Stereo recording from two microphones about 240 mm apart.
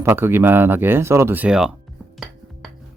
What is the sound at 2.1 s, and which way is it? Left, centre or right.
Music, centre.